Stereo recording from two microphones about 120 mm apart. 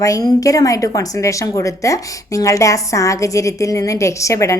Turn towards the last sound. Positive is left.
turn(degrees=25)  # may be behind; listen again after turning